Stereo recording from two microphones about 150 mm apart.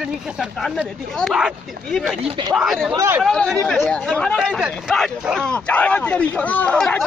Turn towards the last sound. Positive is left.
turn(degrees=10)  # may be behind; listen again after turning